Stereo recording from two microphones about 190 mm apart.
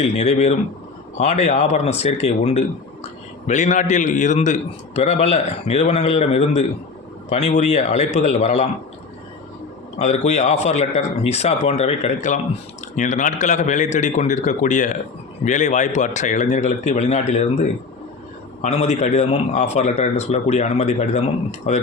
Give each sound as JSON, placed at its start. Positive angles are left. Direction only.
{"t": 0.0, "sound": "speech", "side_deg": 35}
{"t": 10.0, "sound": "speech", "side_deg": 35}